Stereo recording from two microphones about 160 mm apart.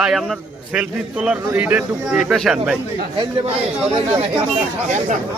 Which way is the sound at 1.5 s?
10° right (ahead or behind).